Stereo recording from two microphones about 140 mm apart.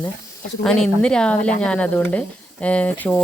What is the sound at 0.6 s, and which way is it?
Speech, 5° left (ahead or behind).